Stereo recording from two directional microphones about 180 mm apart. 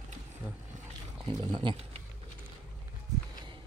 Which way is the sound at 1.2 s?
30° right (ahead or behind).